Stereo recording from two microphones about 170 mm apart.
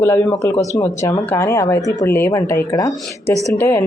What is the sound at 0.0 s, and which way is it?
Speech, 15° left (ahead or behind).